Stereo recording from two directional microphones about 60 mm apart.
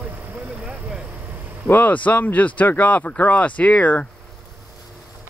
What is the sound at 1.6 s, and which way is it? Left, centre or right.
Speech, left.